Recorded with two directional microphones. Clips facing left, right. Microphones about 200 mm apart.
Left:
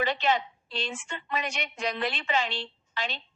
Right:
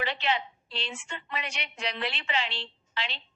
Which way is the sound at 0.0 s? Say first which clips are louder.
Left 4 dB; 45° left (ahead or behind).